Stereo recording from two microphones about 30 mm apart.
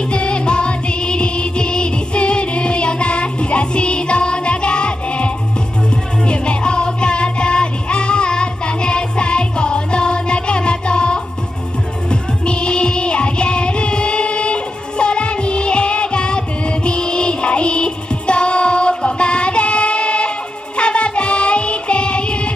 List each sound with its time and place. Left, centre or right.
0.1 s music: left